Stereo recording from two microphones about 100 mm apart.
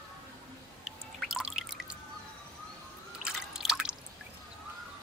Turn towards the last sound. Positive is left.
turn(degrees=-5)  # may be behind; listen again after turning